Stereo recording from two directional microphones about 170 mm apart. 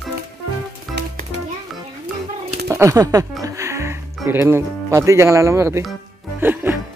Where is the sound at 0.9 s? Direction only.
Centre (ahead or behind).